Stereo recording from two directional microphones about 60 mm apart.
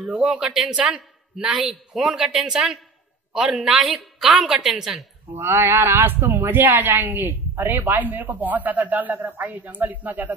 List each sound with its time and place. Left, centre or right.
0.0 s a man's voice: centre
5.4 s a woman's voice: right